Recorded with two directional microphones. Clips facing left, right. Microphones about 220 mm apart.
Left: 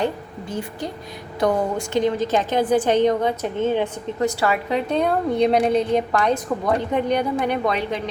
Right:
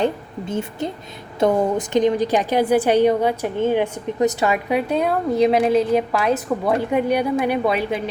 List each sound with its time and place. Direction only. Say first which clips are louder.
0.0 s a woman's voice: right 3 dB; 25° right (ahead or behind); by 8.0 s 10° right (ahead or behind)